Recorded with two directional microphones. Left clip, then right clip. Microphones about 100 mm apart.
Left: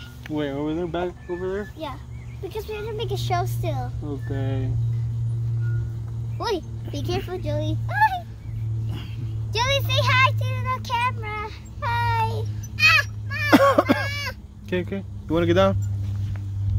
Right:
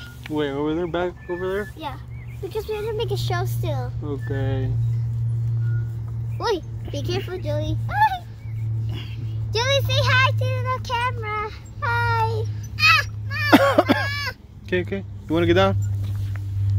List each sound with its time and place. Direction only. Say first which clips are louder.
0.3 s a woman's voice: right 3 dB; 35° left (ahead or behind)
0.6 s speech: right 3 dB; 10° left (ahead or behind)
1.4 s speech: right 3 dB; 15° right (ahead or behind)
2.5 s a woman's voice: right 5 dB; 30° left (ahead or behind)
4.4 s speech: right 2 dB; 20° left (ahead or behind)
6.3 s speech: right 2 dB; 45° left (ahead or behind)
9.5 s child singing: right 1 dB; 55° left (ahead or behind)
12.7 s a sound: even; 10° left (ahead or behind)
13.6 s a sound: left 1 dB; 35° left (ahead or behind)
13.9 s a sound: right 2 dB; 20° left (ahead or behind)
14.7 s a woman's voice: right 3 dB; 35° left (ahead or behind)